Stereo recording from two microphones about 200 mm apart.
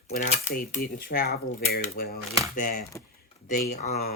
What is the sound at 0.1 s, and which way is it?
Cutlery, 35° left (ahead or behind).